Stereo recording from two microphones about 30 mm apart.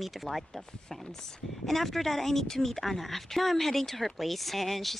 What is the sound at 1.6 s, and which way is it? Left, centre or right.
Speech, centre.